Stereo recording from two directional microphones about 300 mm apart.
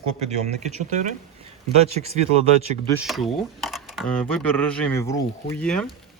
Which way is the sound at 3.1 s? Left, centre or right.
Centre.